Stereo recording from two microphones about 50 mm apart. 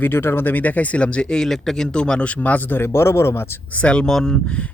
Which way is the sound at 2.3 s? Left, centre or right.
Left.